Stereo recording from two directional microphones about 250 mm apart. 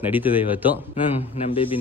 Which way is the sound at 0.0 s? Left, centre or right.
Centre.